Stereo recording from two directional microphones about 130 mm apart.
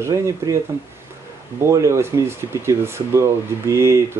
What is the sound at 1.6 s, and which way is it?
Speech, 20° right (ahead or behind).